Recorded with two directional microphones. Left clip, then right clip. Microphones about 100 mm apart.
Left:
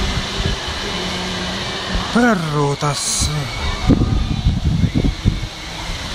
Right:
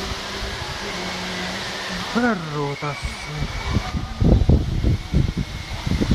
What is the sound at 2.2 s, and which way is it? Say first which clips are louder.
Speech: left 7 dB; 20° left (ahead or behind).